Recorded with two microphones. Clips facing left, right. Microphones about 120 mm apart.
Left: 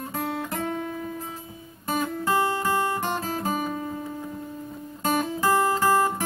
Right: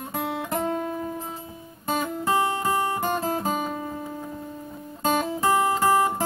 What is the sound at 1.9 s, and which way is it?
Music, 20° right (ahead or behind).